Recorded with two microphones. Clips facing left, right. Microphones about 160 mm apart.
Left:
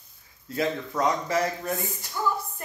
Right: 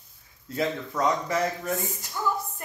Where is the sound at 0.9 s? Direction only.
15° left (ahead or behind).